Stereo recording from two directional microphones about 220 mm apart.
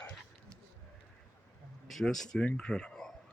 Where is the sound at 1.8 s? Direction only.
Centre (ahead or behind).